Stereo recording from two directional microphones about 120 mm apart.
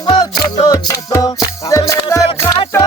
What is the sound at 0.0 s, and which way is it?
Music, 40° left (ahead or behind).